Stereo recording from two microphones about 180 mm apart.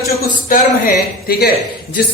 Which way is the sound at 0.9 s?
60° left (ahead or behind).